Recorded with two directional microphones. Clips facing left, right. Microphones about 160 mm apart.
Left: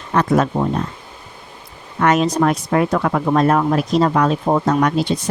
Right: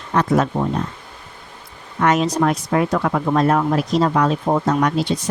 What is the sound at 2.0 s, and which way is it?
Speech, 55° left (ahead or behind).